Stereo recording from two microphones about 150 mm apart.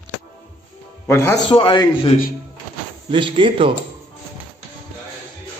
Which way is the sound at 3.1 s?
35° right (ahead or behind).